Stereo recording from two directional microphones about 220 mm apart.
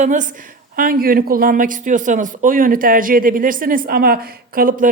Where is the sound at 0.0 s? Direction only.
35° right (ahead or behind).